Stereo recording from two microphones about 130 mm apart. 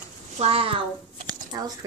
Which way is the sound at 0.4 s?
45° right (ahead or behind).